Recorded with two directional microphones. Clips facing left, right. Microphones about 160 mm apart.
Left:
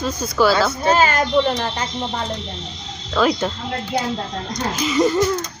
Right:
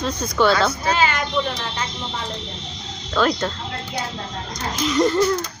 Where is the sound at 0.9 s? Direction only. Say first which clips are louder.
Left 5 dB; 45° left (ahead or behind).